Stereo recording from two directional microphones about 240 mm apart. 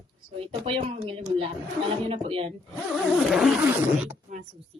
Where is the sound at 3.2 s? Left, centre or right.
Centre.